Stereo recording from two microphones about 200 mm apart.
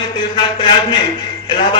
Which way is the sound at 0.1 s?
25° left (ahead or behind).